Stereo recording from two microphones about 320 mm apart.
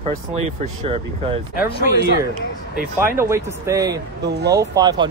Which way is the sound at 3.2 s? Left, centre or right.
Centre.